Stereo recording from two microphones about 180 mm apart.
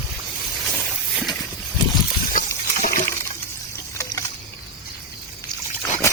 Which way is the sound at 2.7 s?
45° left (ahead or behind).